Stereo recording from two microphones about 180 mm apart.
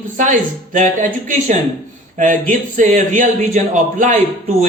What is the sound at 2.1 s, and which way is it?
Speech, 45° right (ahead or behind).